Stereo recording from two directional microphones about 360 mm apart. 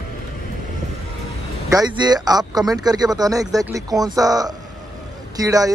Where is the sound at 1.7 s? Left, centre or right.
Centre.